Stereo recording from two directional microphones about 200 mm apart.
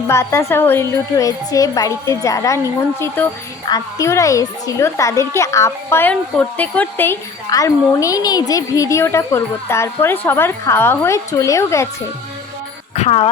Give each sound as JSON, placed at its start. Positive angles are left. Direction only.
{"t": 0.1, "sound": "a child's voice", "side_deg": 15}
{"t": 3.7, "sound": "a child's voice", "side_deg": 15}
{"t": 13.0, "sound": "speech", "side_deg": 30}